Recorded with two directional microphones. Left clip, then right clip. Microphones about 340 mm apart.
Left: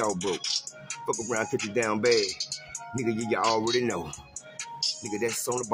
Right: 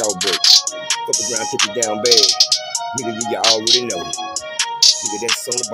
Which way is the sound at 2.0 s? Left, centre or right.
Right.